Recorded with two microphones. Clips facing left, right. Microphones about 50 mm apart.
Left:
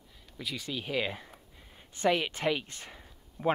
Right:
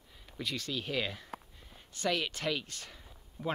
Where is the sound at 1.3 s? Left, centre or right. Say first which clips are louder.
Right 10 dB; right.